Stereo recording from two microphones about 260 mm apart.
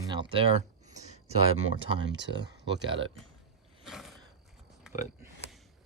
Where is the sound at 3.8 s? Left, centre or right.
Centre.